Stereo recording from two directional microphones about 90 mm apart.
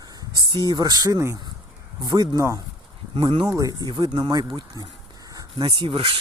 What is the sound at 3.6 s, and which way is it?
Speech, 45° right (ahead or behind).